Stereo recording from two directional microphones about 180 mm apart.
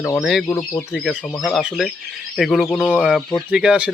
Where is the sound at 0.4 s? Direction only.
15° left (ahead or behind).